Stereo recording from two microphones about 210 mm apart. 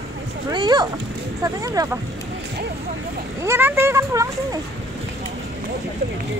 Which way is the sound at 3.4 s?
10° right (ahead or behind).